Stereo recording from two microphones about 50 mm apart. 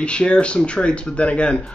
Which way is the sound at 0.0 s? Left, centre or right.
Left.